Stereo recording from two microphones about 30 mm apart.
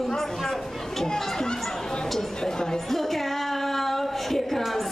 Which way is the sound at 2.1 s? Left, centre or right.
Centre.